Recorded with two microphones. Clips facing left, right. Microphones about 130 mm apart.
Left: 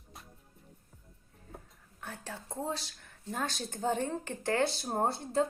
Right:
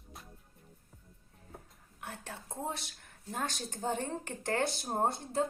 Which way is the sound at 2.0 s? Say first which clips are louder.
Left 1 dB; 25° right (ahead or behind).